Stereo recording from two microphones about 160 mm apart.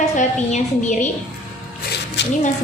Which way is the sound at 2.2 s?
90° left.